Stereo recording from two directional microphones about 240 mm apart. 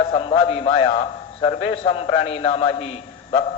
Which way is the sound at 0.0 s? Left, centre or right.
Left.